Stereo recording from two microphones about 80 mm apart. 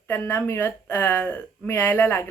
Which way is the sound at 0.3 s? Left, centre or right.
Left.